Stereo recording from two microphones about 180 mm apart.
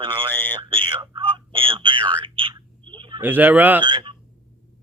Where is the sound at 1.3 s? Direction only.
30° right (ahead or behind).